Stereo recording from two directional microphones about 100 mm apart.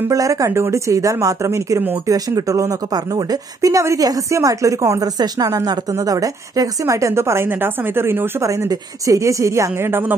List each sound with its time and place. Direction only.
0.1 s speech: 35° right (ahead or behind)